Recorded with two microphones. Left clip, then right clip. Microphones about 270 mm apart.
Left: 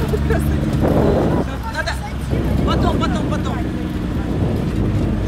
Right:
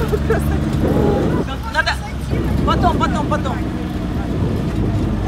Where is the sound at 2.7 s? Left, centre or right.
Centre.